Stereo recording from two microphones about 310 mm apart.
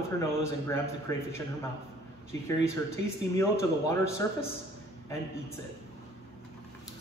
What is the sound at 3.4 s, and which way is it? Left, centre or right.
Speech, centre.